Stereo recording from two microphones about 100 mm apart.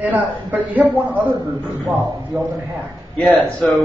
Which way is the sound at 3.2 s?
15° left (ahead or behind).